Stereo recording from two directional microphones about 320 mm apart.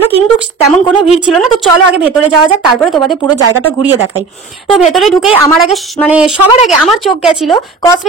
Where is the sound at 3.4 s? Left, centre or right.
Right.